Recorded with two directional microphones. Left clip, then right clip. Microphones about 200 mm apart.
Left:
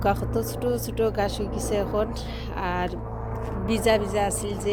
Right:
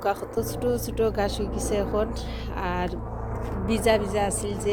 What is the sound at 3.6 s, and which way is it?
Speech, 10° left (ahead or behind).